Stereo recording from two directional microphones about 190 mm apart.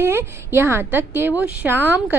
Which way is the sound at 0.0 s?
10° right (ahead or behind).